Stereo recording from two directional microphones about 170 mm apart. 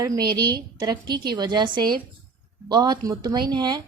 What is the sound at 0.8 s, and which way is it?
A woman's voice, 25° right (ahead or behind).